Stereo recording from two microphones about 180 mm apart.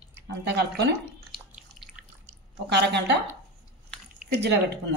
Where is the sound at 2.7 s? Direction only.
70° right (ahead or behind).